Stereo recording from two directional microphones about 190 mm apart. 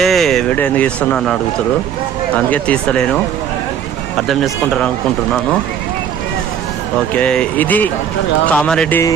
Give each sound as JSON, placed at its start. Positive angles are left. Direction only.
{"t": 0.0, "sound": "speech", "side_deg": 0}
{"t": 4.3, "sound": "speech", "side_deg": 0}
{"t": 7.2, "sound": "speech", "side_deg": 5}